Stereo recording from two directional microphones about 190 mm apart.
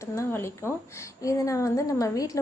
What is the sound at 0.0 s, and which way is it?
A woman's voice, 15° left (ahead or behind).